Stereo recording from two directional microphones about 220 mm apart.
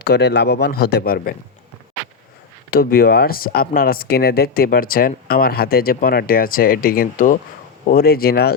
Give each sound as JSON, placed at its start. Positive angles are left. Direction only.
{"t": 0.0, "sound": "a man's voice", "side_deg": 45}
{"t": 2.6, "sound": "a man's voice", "side_deg": 45}